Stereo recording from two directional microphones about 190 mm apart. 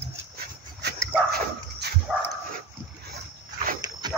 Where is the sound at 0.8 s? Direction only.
60° right (ahead or behind).